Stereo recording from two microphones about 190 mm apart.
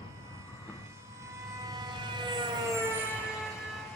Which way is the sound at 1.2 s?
15° right (ahead or behind).